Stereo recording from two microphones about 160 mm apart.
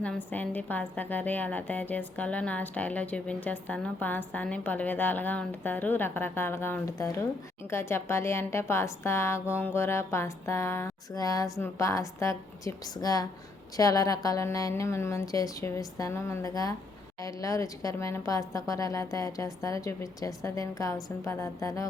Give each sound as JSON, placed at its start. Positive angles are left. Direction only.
{"t": 0.0, "sound": "a woman's voice", "side_deg": 10}